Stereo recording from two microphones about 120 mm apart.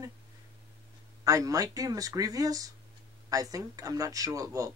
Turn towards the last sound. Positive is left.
turn(degrees=-30)  # may be behind; listen again after turning